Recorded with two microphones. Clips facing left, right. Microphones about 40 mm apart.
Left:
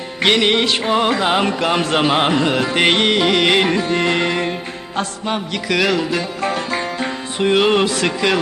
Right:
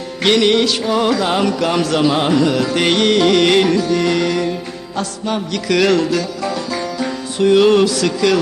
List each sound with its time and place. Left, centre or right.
0.2 s music: left
5.6 s music: centre
6.4 s music: left